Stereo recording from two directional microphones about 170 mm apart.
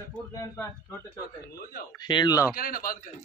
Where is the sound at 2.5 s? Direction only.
60° left (ahead or behind).